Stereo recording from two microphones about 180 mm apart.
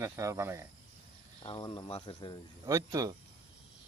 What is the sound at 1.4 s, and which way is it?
Speech, 30° left (ahead or behind).